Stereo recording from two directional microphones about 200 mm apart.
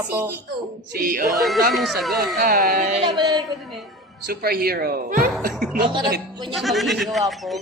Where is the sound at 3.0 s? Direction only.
20° right (ahead or behind).